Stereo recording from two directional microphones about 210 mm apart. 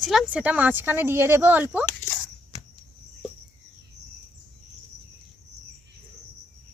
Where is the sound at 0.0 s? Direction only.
Centre (ahead or behind).